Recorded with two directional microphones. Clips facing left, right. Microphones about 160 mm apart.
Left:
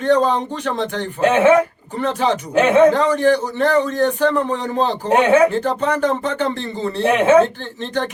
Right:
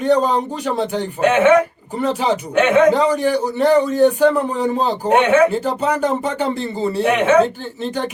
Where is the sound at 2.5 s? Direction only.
35° left (ahead or behind).